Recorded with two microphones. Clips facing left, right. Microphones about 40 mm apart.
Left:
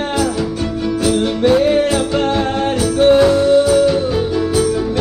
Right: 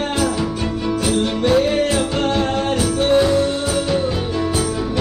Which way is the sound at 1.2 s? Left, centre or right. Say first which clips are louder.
Left 3 dB; centre.